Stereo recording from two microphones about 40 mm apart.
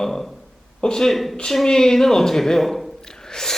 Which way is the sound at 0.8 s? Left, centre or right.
Centre.